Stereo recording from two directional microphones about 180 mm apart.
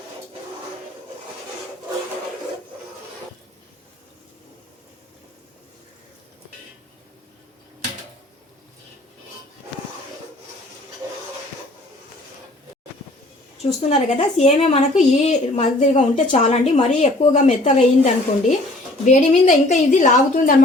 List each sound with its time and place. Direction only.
13.6 s a woman's voice: 35° left (ahead or behind)